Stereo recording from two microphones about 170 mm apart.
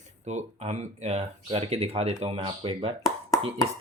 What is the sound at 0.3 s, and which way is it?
Speech, 40° right (ahead or behind).